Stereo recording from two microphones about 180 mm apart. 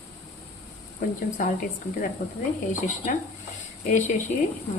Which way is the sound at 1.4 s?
45° left (ahead or behind).